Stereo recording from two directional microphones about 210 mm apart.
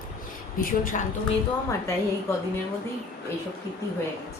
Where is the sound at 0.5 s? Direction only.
40° left (ahead or behind).